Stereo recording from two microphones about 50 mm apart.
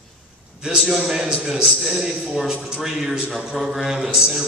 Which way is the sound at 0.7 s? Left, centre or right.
Centre.